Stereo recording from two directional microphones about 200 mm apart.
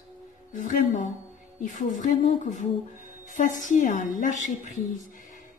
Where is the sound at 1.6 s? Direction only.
40° left (ahead or behind).